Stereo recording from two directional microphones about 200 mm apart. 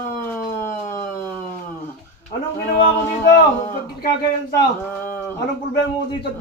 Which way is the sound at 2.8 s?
35° left (ahead or behind).